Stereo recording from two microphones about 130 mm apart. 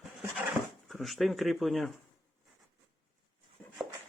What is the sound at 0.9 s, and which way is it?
Speech, centre (ahead or behind).